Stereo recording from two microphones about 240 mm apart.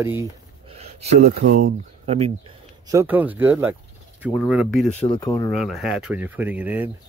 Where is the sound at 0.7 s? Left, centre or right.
Right.